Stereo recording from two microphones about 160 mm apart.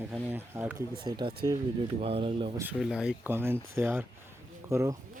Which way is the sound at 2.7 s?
5° right (ahead or behind).